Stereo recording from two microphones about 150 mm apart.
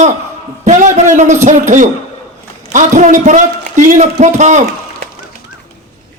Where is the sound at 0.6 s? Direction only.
55° right (ahead or behind).